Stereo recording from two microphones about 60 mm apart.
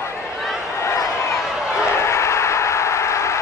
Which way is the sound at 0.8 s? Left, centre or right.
Left.